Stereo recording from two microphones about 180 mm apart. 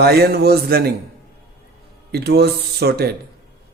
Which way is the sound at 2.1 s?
65° right (ahead or behind).